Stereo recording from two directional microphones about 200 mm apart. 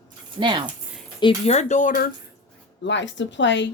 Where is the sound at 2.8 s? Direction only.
65° left (ahead or behind).